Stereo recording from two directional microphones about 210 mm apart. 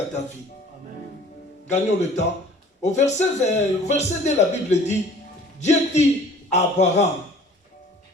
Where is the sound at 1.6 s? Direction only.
35° left (ahead or behind).